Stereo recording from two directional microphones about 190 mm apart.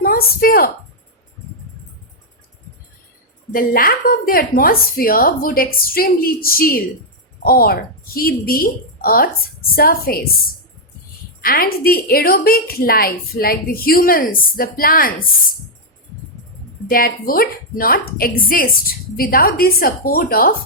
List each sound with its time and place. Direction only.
0.0 s a woman's voice: 50° left (ahead or behind)
3.5 s a woman's voice: 50° left (ahead or behind)
11.3 s a woman's voice: 50° left (ahead or behind)
16.9 s a woman's voice: 50° left (ahead or behind)